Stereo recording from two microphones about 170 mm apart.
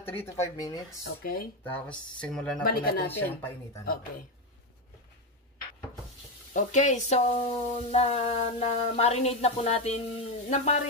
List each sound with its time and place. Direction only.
0.0 s speech: 15° left (ahead or behind)
1.0 s speech: 60° left (ahead or behind)
1.6 s speech: 10° left (ahead or behind)
2.6 s speech: 60° left (ahead or behind)
3.1 s speech: 10° left (ahead or behind)
6.5 s speech: 45° left (ahead or behind)